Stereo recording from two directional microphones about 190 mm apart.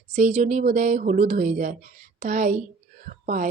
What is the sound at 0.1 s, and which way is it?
A woman's voice, 35° right (ahead or behind).